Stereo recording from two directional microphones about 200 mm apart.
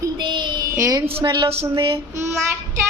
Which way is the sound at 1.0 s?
25° right (ahead or behind).